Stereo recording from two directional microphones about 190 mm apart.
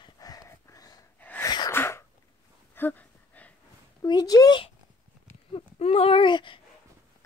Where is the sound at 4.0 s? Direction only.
20° left (ahead or behind).